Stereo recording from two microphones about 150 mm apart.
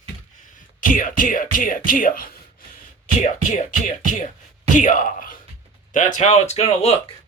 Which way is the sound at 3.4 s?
60° left (ahead or behind).